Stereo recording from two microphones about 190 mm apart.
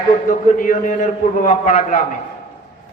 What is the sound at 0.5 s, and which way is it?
A man's voice, 45° left (ahead or behind).